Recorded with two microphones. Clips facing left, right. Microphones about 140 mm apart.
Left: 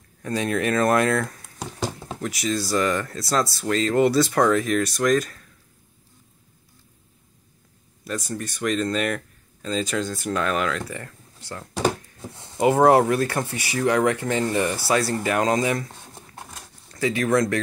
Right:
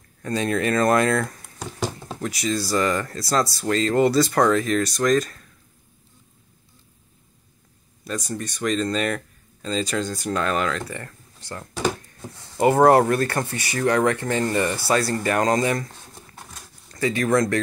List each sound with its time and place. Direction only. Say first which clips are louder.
0.2 s speech: right 1 dB; 5° left (ahead or behind)
8.0 s speech: even; 5° left (ahead or behind)
16.2 s dog: left 4 dB; 20° left (ahead or behind)
16.9 s speech: even; 5° left (ahead or behind)